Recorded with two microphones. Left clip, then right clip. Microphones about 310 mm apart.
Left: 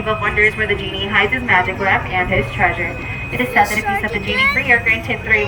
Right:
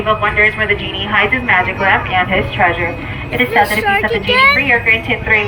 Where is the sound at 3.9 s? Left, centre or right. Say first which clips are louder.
Right 6 dB; centre.